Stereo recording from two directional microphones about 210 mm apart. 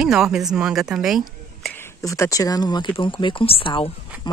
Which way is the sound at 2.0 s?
15° left (ahead or behind).